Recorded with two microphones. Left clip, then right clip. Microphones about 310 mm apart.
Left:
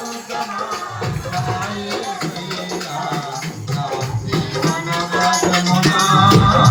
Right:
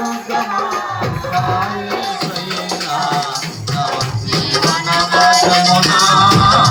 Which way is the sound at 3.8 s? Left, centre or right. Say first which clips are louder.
Right 4 dB; centre.